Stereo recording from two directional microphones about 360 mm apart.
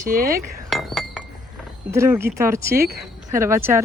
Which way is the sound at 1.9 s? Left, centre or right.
Centre.